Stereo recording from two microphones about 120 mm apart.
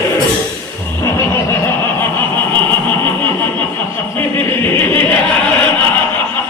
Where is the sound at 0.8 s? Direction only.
20° left (ahead or behind).